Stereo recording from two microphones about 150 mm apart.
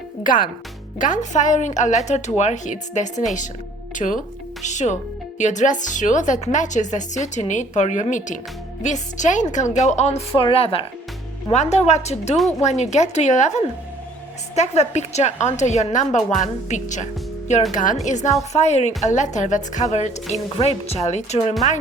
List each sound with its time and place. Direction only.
0.2 s a woman's voice: 65° left (ahead or behind); by 10.8 s 40° left (ahead or behind)
11.5 s a woman's voice: 50° left (ahead or behind)
14.5 s a woman's voice: 50° left (ahead or behind)